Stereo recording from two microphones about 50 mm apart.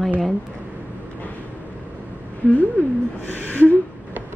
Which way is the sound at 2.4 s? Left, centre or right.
Left.